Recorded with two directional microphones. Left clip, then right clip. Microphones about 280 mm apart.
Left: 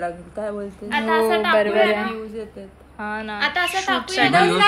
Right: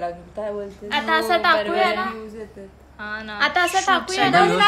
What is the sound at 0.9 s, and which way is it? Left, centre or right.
Speech, right.